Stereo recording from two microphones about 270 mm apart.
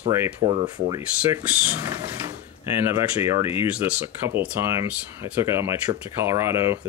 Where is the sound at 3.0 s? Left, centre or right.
Centre.